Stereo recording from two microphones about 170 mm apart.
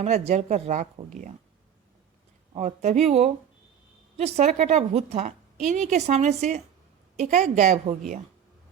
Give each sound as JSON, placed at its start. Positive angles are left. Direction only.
{"t": 0.0, "sound": "speech", "side_deg": -40}
{"t": 2.5, "sound": "a woman's voice", "side_deg": -45}